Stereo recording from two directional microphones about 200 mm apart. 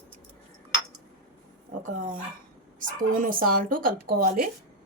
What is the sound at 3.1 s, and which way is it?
Speech, 45° right (ahead or behind).